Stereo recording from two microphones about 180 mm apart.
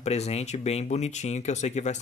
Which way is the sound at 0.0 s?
35° left (ahead or behind).